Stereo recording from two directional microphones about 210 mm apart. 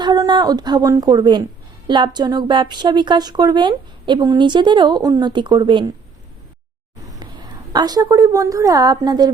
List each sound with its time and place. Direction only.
0.0 s a woman's voice: 20° right (ahead or behind)
7.2 s a sound: 20° right (ahead or behind)
7.7 s a woman's voice: 20° right (ahead or behind)